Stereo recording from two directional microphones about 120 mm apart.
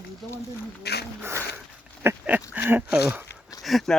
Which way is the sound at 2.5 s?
15° right (ahead or behind).